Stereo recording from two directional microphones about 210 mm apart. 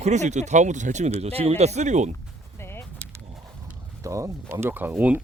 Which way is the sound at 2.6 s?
10° left (ahead or behind).